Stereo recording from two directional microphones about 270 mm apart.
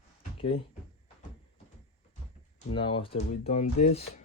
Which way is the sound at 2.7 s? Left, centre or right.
Centre.